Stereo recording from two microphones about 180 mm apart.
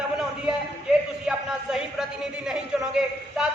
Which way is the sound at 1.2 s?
5° right (ahead or behind).